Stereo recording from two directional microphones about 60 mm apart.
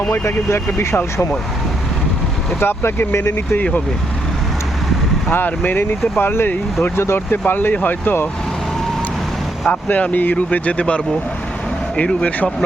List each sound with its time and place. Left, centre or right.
0.1 s speech: left
2.6 s speech: left
3.5 s speech: left
5.3 s speech: left
7.4 s speech: left
9.6 s speech: left